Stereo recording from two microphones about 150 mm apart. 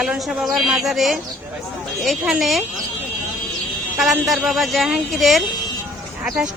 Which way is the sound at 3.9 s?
Centre (ahead or behind).